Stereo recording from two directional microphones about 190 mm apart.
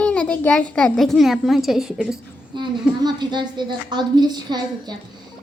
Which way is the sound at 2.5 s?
25° right (ahead or behind).